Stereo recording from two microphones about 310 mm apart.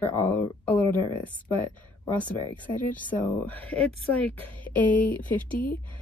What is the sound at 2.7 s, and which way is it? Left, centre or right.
Speech, centre.